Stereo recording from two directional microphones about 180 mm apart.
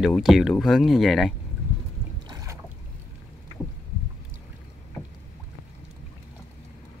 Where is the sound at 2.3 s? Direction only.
20° right (ahead or behind).